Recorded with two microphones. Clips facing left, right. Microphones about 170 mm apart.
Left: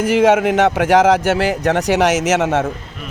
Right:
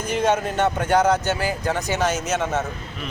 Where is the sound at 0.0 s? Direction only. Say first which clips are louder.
Left 8 dB; 90° left.